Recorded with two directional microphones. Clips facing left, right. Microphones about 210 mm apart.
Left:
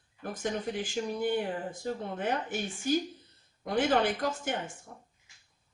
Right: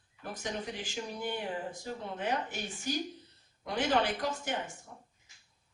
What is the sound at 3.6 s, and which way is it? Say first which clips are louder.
Speech: left 3 dB; 50° left (ahead or behind).